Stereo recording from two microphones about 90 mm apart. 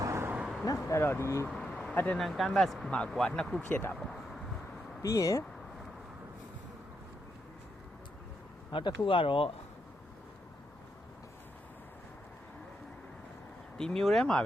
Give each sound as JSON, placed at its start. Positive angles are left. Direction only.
{"t": 0.0, "sound": "vehicle", "side_deg": -30}
{"t": 0.3, "sound": "vehicle", "side_deg": -5}
{"t": 0.6, "sound": "speech", "side_deg": 35}
{"t": 1.6, "sound": "vehicle", "side_deg": 10}
{"t": 2.1, "sound": "speech", "side_deg": 0}
{"t": 3.7, "sound": "speech", "side_deg": 20}
{"t": 3.9, "sound": "speech", "side_deg": 0}
{"t": 5.0, "sound": "speech", "side_deg": 35}
{"t": 8.7, "sound": "speech", "side_deg": 65}
{"t": 13.7, "sound": "speech", "side_deg": 5}